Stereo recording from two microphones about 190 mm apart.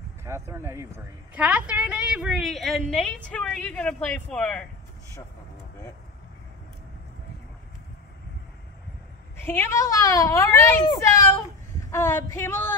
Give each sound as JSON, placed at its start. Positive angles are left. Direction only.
{"t": 0.2, "sound": "a woman's voice", "side_deg": -15}
{"t": 9.4, "sound": "a child's voice", "side_deg": 10}